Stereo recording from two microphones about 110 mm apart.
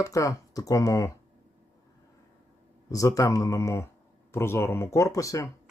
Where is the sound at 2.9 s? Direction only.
30° left (ahead or behind).